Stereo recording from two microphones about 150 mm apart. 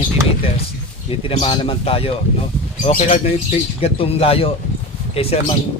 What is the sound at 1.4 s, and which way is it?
A man's voice, 35° left (ahead or behind).